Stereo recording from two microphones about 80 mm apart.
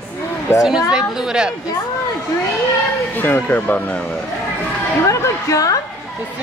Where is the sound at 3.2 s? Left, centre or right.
Left.